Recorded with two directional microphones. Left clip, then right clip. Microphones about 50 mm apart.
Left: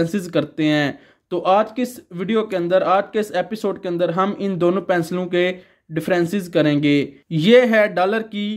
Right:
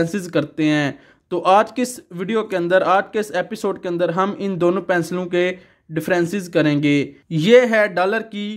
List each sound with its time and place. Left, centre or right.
0.0 s speech: right
1.4 s speech: right
2.1 s speech: right
2.5 s speech: right
2.9 s speech: right